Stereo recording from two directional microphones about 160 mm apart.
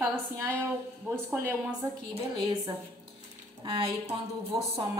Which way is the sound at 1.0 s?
15° right (ahead or behind).